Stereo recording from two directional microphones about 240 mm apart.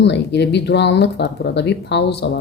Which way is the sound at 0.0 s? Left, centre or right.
Left.